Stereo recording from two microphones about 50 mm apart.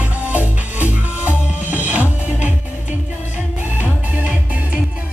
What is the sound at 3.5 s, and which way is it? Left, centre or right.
Music, right.